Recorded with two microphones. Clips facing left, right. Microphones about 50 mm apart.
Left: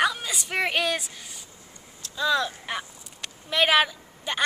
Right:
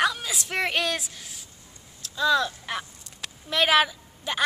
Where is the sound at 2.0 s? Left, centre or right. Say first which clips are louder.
Right 2 dB; centre.